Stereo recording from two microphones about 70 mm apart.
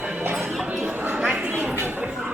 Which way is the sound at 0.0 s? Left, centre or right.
Right.